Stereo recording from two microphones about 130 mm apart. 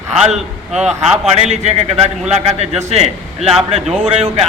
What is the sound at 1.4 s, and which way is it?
A man's voice, 60° right (ahead or behind).